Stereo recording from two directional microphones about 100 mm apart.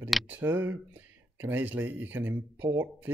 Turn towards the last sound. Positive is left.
turn(degrees=-20)  # may be behind; listen again after turning